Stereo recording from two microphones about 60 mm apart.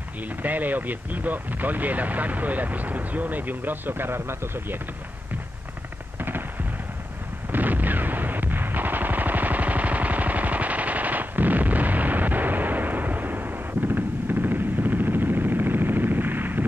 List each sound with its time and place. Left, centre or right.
0.4 s speech: right
6.1 s a sound: right
7.5 s gunshot: right